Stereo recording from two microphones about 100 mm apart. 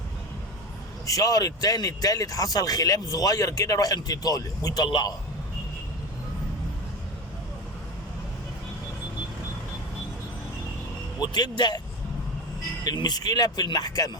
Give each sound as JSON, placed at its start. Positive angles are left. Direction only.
{"t": 1.0, "sound": "a man's voice", "side_deg": 35}
{"t": 11.2, "sound": "a man's voice", "side_deg": 45}
{"t": 12.8, "sound": "speech", "side_deg": 45}